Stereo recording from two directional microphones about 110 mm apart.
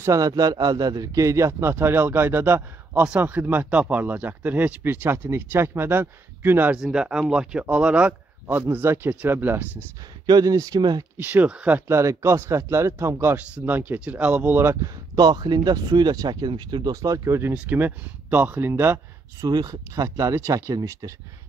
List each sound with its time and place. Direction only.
0.0 s a man's voice: 30° right (ahead or behind)
6.8 s speech: 5° right (ahead or behind)
10.2 s speech: 35° right (ahead or behind)
11.1 s speech: 15° right (ahead or behind)
11.9 s speech: 25° right (ahead or behind)
14.8 s speech: 40° right (ahead or behind); by 18.9 s 20° right (ahead or behind)
19.4 s speech: 35° right (ahead or behind)